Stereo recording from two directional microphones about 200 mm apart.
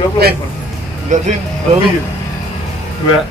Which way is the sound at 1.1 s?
35° right (ahead or behind).